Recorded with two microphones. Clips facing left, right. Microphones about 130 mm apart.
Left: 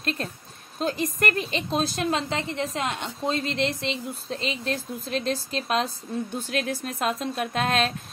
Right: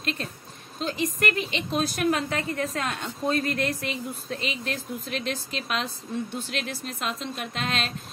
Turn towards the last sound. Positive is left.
turn(degrees=45)  # may be behind; listen again after turning